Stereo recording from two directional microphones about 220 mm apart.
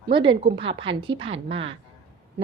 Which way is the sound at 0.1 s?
20° right (ahead or behind).